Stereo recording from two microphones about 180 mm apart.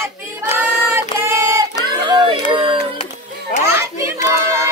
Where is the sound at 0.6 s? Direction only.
15° right (ahead or behind).